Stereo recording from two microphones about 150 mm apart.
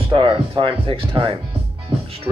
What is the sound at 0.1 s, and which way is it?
Speech, 35° right (ahead or behind).